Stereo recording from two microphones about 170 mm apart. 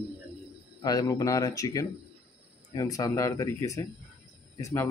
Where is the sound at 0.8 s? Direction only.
20° left (ahead or behind).